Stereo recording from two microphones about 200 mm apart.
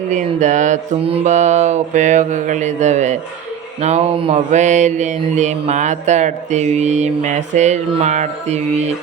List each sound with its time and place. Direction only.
0.1 s mantra: 35° right (ahead or behind)
3.8 s speech: 30° right (ahead or behind)
4.4 s mantra: 35° right (ahead or behind)